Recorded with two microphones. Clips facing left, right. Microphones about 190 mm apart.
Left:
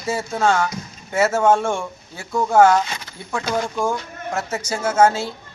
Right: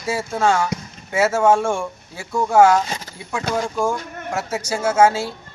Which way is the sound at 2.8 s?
40° right (ahead or behind).